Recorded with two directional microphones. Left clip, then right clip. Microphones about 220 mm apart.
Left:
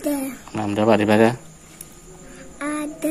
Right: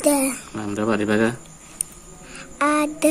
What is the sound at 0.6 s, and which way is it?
Speech, 30° left (ahead or behind).